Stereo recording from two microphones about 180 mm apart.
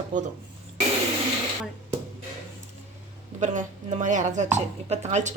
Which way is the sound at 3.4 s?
40° right (ahead or behind).